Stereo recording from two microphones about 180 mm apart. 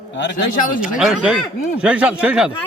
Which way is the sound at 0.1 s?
75° left (ahead or behind).